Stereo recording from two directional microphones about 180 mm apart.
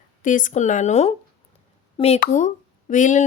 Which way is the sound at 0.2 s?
45° left (ahead or behind).